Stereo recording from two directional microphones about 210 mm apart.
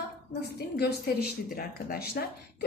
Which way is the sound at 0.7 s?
50° left (ahead or behind).